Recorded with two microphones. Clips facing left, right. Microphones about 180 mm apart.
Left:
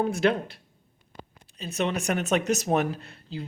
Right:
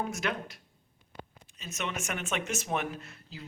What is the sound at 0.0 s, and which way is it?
Speech, 30° left (ahead or behind).